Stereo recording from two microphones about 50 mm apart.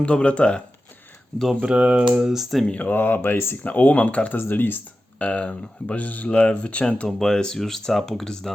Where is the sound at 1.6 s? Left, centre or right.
Right.